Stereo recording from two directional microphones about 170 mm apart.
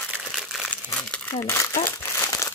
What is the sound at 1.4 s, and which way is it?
Speech, 15° left (ahead or behind).